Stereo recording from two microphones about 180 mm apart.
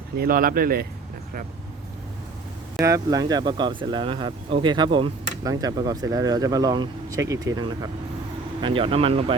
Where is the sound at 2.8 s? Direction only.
20° right (ahead or behind).